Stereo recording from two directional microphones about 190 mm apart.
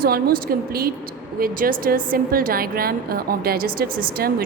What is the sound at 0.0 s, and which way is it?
A woman's voice, 50° right (ahead or behind).